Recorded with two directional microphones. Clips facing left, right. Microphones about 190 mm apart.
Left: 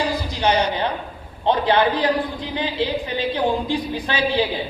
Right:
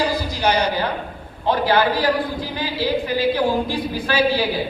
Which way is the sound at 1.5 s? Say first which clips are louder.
Even; 25° left (ahead or behind).